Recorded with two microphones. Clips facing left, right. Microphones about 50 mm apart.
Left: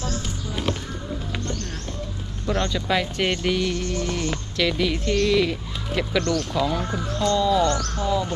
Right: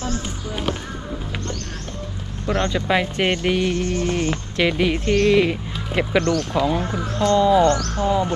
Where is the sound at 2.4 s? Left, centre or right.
Right.